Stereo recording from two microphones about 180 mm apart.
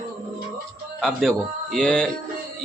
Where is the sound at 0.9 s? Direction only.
Centre (ahead or behind).